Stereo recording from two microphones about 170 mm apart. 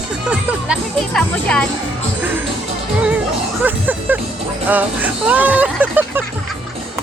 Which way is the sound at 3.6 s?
10° right (ahead or behind).